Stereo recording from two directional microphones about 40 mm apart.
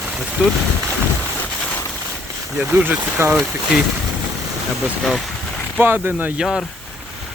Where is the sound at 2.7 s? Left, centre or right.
Right.